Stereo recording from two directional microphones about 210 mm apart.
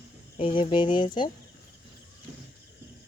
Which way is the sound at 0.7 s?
20° left (ahead or behind).